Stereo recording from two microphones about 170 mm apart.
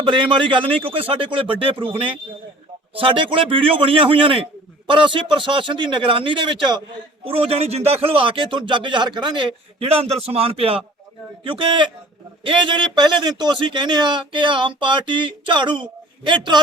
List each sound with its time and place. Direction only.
0.0 s a man's voice: 30° right (ahead or behind)